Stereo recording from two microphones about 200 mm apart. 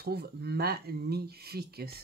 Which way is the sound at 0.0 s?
50° right (ahead or behind).